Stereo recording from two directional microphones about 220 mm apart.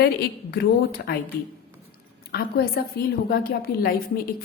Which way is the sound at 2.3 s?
45° left (ahead or behind).